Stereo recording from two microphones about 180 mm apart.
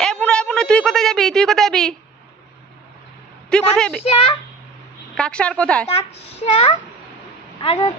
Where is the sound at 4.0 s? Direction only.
30° left (ahead or behind).